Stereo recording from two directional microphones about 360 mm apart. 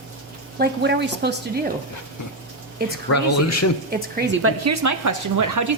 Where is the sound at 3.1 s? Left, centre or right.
Left.